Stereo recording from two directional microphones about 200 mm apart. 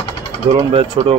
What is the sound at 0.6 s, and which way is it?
Speech, 30° right (ahead or behind).